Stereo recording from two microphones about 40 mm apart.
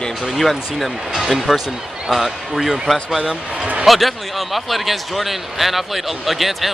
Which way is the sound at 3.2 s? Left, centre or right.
Centre.